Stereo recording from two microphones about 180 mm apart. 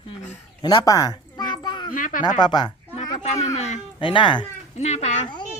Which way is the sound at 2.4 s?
25° left (ahead or behind).